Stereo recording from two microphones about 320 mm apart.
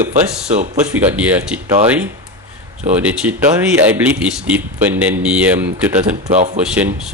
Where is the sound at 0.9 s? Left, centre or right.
Centre.